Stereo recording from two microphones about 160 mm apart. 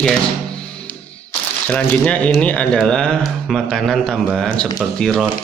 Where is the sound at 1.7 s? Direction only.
10° left (ahead or behind).